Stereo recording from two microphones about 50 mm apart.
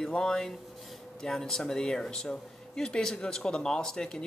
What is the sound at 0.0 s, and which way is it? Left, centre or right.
Speech, centre.